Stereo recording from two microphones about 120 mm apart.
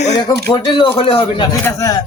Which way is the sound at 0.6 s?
45° left (ahead or behind).